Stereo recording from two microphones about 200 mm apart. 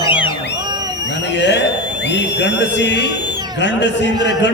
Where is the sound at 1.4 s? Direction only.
60° left (ahead or behind).